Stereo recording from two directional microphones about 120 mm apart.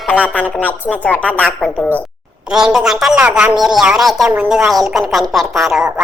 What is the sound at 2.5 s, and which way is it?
A woman's voice, 5° right (ahead or behind).